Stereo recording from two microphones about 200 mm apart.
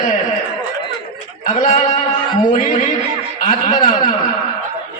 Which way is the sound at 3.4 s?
40° left (ahead or behind).